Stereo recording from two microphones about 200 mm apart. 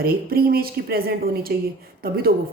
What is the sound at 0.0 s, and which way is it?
Speech, 50° right (ahead or behind).